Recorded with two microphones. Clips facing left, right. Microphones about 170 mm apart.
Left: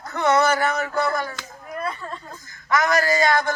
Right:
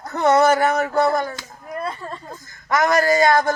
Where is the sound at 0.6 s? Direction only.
45° right (ahead or behind).